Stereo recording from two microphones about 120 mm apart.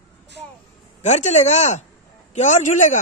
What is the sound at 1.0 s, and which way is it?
Speech, 70° left (ahead or behind).